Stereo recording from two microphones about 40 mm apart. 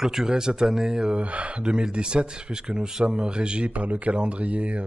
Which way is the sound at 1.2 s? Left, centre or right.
Right.